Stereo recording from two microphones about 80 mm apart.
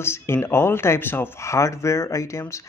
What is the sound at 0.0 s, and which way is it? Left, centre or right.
Speech, left.